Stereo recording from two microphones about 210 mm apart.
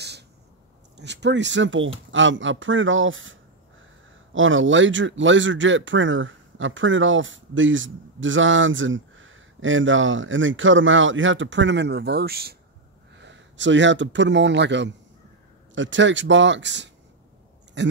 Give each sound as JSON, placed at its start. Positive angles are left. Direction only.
{"t": 0.9, "sound": "speech", "side_deg": -55}
{"t": 13.1, "sound": "speech", "side_deg": -60}